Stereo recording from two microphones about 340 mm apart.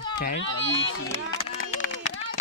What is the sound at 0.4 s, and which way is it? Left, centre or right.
Speech, left.